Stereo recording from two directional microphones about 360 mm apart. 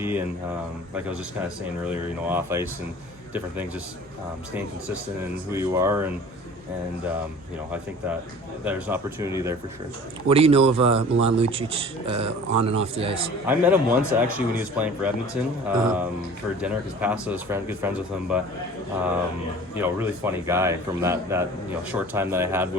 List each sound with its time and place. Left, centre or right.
0.0 s speech: centre
2.2 s speech: centre
5.5 s speech: centre
8.6 s speech: centre
19.7 s speech: centre